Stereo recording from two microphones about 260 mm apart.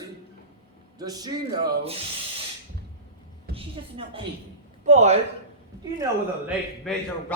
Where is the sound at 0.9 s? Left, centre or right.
Centre.